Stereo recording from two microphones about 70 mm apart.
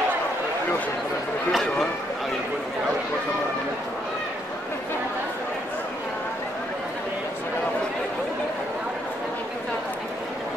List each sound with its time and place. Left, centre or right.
1.5 s speech: centre